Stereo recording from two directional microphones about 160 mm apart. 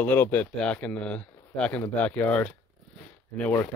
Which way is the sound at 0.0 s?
10° left (ahead or behind).